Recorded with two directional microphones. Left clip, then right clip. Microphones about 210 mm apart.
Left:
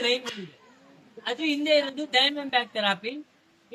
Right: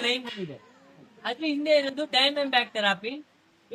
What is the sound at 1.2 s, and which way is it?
Speech, centre (ahead or behind).